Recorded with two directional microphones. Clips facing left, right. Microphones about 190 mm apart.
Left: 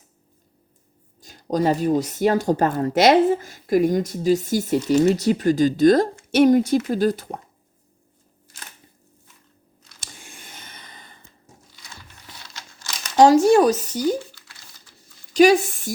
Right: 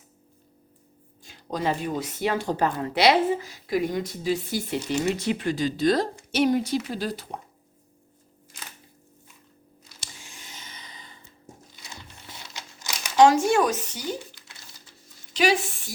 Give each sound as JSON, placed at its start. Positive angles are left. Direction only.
{"t": 1.2, "sound": "speech", "side_deg": 40}
{"t": 10.0, "sound": "a sound", "side_deg": 55}
{"t": 12.3, "sound": "crumpling", "side_deg": -15}
{"t": 13.1, "sound": "speech", "side_deg": 35}
{"t": 15.3, "sound": "speech", "side_deg": 45}